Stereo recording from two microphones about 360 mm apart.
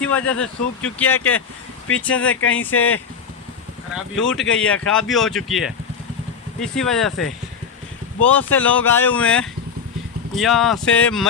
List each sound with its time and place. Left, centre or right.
0.0 s speech: centre
2.3 s speech: left
3.9 s speech: centre